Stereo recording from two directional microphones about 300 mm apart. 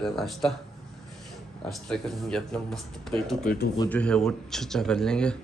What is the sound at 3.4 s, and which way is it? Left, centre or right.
Speech, left.